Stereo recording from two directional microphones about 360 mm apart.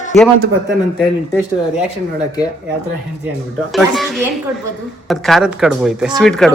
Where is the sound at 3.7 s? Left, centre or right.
Centre.